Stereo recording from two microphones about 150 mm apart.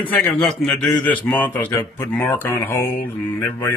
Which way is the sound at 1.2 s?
10° left (ahead or behind).